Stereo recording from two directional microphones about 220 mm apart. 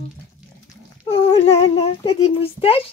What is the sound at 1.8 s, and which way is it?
A woman's voice, 30° left (ahead or behind).